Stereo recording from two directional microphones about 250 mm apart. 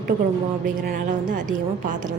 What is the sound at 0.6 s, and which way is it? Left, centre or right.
Speech, right.